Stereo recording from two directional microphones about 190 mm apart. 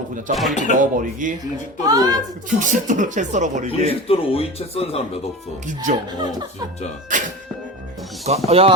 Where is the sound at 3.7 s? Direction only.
30° left (ahead or behind).